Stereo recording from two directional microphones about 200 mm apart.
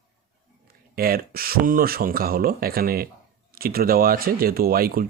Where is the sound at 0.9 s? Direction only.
50° right (ahead or behind).